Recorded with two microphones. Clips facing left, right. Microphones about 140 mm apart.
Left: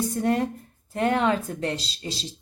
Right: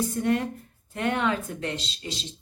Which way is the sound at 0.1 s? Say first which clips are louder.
Left 1 dB; 35° left (ahead or behind).